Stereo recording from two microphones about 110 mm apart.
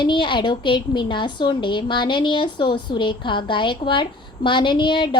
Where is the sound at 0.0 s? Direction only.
45° left (ahead or behind).